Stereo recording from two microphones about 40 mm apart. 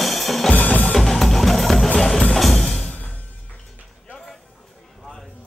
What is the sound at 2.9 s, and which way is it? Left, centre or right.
Music, left.